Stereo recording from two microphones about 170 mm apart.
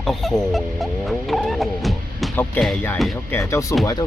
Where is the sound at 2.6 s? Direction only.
10° left (ahead or behind).